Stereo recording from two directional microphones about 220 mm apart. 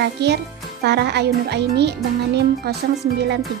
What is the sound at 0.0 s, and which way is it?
Speech, 50° right (ahead or behind).